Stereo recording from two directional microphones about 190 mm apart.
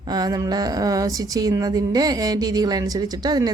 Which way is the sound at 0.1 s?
20° right (ahead or behind).